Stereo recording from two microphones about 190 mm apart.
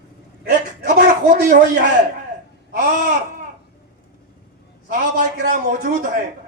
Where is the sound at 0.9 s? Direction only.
55° right (ahead or behind).